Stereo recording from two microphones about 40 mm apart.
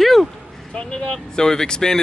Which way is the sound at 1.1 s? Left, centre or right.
Centre.